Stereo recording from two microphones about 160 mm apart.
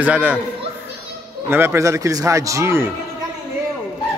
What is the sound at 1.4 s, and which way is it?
A man's voice, 15° right (ahead or behind).